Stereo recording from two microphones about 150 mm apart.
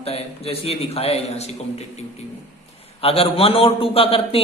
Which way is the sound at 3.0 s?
40° left (ahead or behind).